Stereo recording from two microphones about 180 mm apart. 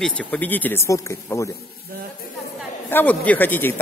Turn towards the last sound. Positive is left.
turn(degrees=10)  # may be behind; listen again after turning